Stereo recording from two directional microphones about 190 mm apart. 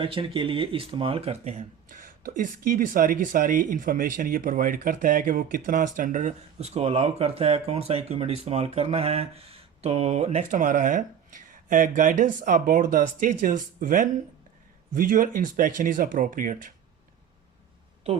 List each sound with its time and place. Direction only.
0.0 s speech: 25° right (ahead or behind); by 16.7 s 45° right (ahead or behind)